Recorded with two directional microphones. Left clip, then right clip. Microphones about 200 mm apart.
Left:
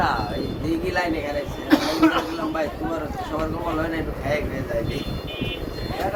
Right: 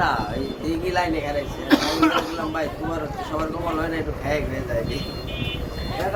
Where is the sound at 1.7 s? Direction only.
45° right (ahead or behind).